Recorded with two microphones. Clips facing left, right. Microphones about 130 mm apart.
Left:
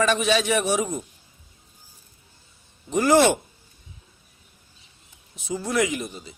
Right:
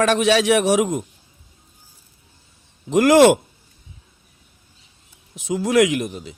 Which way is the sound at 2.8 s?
90° right.